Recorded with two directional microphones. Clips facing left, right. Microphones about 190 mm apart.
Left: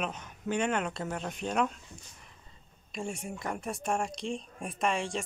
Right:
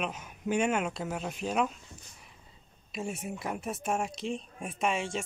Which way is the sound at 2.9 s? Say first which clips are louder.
Right 1 dB; 5° right (ahead or behind).